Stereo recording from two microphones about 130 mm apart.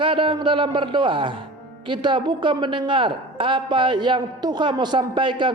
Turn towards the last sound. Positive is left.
turn(degrees=-40)  # may be behind; listen again after turning